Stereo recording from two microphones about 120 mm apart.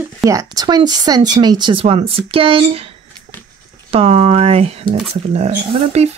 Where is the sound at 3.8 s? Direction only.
55° right (ahead or behind).